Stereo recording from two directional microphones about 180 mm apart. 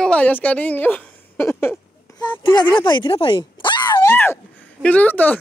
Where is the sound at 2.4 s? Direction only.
25° left (ahead or behind).